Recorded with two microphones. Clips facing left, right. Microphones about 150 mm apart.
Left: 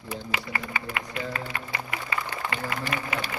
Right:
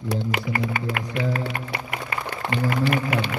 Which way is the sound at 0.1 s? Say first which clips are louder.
Right 7 dB; 70° right (ahead or behind).